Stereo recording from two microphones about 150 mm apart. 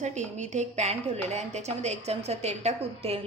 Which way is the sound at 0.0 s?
50° right (ahead or behind).